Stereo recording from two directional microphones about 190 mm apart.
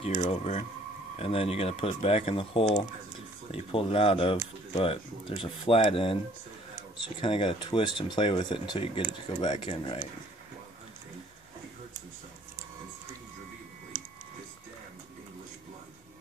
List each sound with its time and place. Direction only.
0.0 s speech: 30° left (ahead or behind)
7.2 s speech: 25° left (ahead or behind)